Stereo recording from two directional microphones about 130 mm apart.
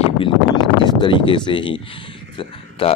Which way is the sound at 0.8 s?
35° left (ahead or behind).